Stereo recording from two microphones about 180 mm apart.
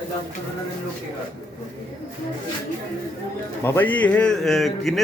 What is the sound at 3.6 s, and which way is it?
A man's voice, 10° left (ahead or behind).